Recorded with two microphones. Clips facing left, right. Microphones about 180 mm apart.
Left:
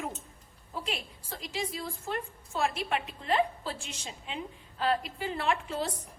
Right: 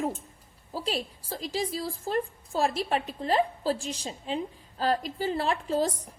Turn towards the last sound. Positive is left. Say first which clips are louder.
# right 7 dB
turn(degrees=-40)  # may be behind; listen again after turning